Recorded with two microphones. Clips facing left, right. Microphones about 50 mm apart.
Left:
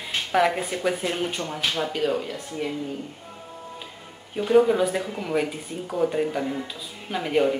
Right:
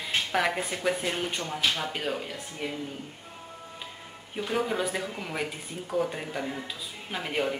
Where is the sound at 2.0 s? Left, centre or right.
Centre.